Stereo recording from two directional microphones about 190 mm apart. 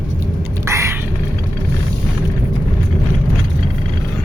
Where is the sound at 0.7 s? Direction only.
15° right (ahead or behind).